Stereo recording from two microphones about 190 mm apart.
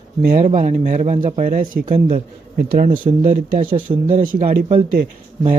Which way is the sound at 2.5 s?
50° right (ahead or behind).